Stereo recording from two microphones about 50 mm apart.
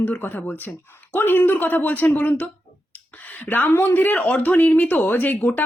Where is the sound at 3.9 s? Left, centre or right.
Left.